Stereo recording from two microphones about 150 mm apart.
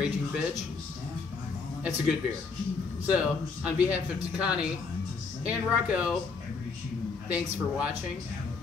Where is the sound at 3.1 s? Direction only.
5° right (ahead or behind).